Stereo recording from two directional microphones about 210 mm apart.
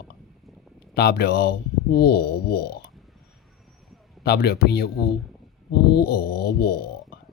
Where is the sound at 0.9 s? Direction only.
50° left (ahead or behind).